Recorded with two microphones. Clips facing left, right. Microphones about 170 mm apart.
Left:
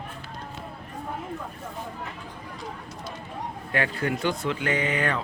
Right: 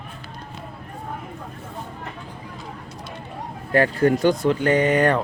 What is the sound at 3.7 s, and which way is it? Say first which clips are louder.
Speech: right 10 dB; 40° right (ahead or behind).